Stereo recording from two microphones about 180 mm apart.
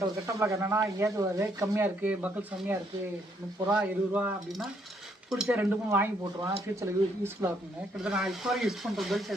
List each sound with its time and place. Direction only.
0.3 s speech: 15° right (ahead or behind)
8.0 s speech: 5° right (ahead or behind)